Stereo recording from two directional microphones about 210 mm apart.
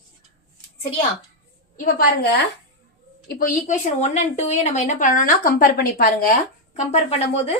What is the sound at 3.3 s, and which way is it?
A woman's voice, 40° left (ahead or behind).